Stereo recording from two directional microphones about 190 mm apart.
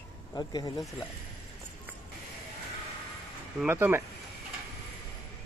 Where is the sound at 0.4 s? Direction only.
20° left (ahead or behind).